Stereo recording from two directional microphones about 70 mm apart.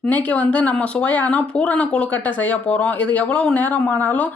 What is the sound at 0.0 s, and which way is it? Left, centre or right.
Speech, left.